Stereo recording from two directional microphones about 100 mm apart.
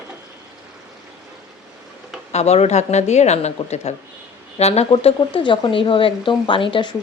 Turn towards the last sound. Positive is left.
turn(degrees=55)  # may be behind; listen again after turning